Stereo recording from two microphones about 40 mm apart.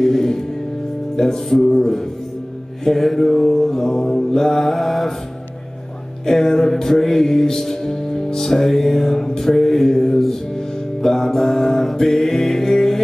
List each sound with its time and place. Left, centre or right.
0.0 s music: centre
6.2 s music: centre